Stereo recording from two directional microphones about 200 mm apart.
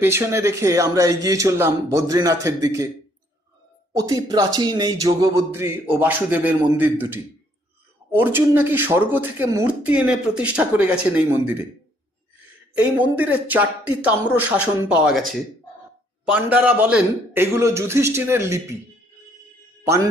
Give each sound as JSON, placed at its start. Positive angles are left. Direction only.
{"t": 0.0, "sound": "speech", "side_deg": -10}
{"t": 3.9, "sound": "speech", "side_deg": -20}
{"t": 8.2, "sound": "speech", "side_deg": -10}
{"t": 13.0, "sound": "speech", "side_deg": -10}